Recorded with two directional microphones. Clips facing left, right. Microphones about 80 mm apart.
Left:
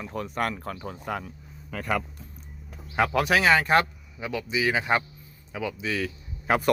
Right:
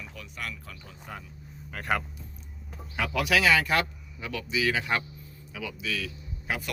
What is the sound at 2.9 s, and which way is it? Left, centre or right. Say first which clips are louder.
Speech: left 4 dB; left.